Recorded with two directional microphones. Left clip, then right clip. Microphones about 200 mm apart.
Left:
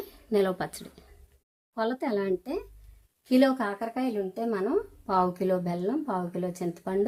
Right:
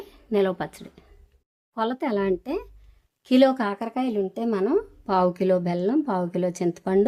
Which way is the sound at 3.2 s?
45° right (ahead or behind).